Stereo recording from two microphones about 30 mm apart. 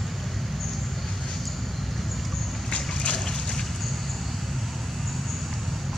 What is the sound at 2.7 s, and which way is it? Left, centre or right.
Splash, left.